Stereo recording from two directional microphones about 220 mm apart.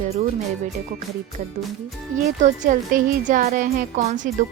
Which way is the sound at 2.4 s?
35° right (ahead or behind).